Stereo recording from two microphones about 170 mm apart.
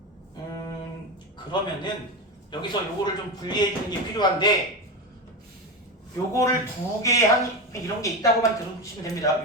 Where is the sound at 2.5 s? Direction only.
25° left (ahead or behind).